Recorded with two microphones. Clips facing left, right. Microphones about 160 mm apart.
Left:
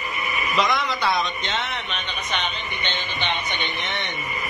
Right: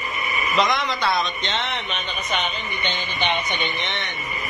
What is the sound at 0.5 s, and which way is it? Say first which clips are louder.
Speech: right 1 dB; centre (ahead or behind).